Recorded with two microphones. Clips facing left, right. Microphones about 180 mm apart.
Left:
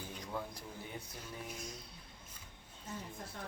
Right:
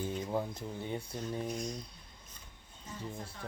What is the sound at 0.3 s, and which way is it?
Speech, 25° right (ahead or behind).